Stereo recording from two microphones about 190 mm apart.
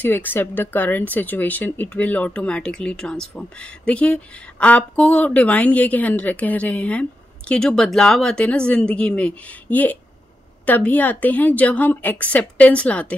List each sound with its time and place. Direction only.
0.0 s speech: 10° left (ahead or behind)